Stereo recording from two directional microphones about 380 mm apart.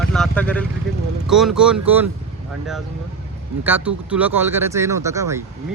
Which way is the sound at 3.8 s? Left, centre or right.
Centre.